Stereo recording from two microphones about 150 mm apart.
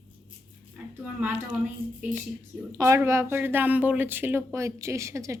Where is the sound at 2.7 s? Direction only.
20° right (ahead or behind).